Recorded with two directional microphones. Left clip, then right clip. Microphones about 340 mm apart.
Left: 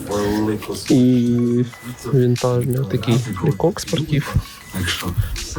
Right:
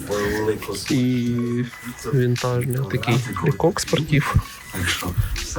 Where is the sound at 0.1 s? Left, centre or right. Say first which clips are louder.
Left 2 dB; centre.